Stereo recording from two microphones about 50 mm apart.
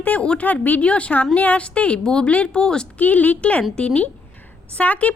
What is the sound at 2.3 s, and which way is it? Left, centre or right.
Speech, left.